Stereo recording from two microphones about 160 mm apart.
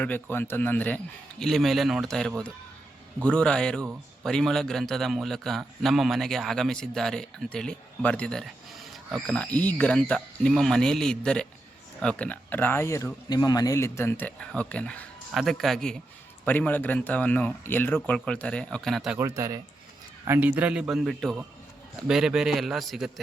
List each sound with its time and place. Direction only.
0.0 s a man's voice: 10° left (ahead or behind)
19.2 s a man's voice: 20° right (ahead or behind); by 23.2 s centre (ahead or behind)